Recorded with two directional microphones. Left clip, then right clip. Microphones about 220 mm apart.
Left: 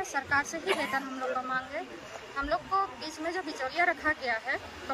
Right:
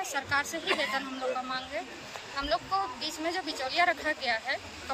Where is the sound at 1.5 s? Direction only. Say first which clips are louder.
Left 1 dB; 5° left (ahead or behind).